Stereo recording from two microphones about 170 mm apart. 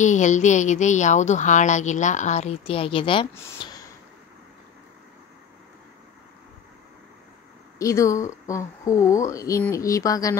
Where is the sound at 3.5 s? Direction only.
25° left (ahead or behind).